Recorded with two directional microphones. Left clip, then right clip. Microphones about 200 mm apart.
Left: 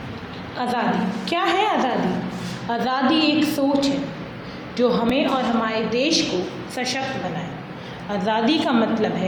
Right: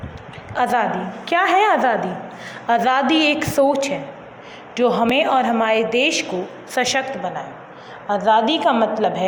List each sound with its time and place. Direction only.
0.5 s a woman's voice: 50° right (ahead or behind)
4.8 s a woman's voice: 55° right (ahead or behind)
8.1 s a woman's voice: 30° right (ahead or behind)